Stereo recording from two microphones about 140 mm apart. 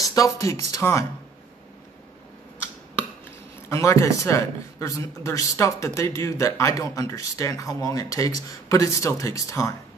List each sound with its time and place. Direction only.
0.0 s a man's voice: 25° left (ahead or behind)
3.6 s a man's voice: 20° left (ahead or behind)